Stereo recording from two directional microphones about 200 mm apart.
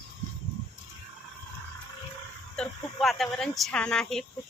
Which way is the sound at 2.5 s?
5° left (ahead or behind).